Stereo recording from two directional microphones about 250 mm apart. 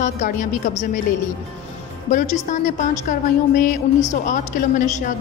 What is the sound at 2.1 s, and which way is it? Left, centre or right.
A woman's voice, left.